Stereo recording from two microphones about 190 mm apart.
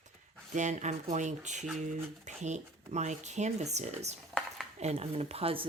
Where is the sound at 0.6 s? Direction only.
40° right (ahead or behind).